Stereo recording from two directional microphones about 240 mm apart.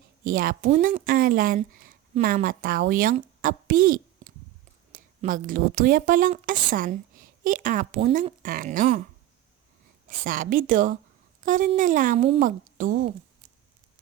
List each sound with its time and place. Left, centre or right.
0.3 s a woman's voice: right
10.1 s a woman's voice: right